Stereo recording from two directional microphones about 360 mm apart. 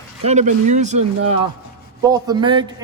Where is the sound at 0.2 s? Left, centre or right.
Centre.